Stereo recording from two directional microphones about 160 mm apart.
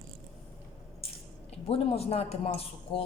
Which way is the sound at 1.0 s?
40° left (ahead or behind).